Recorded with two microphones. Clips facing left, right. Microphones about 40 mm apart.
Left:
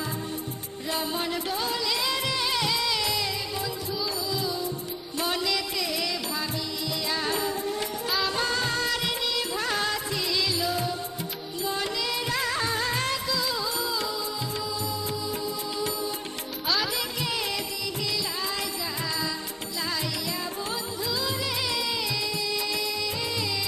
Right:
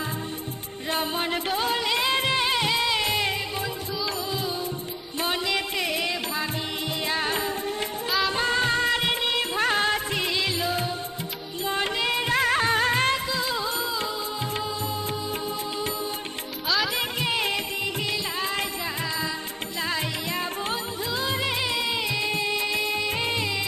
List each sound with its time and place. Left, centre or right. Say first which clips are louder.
0.9 s music: right 3 dB; right
5.2 s music: right 2 dB; right
8.3 s music of bollywood: right 4 dB; right
16.6 s music: right 2 dB; centre
17.0 s music: right 4 dB; right
20.7 s music: right 2 dB; right